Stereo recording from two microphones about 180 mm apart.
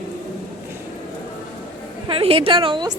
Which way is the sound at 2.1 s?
30° right (ahead or behind).